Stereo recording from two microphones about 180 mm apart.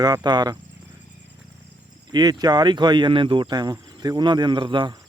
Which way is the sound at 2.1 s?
20° right (ahead or behind).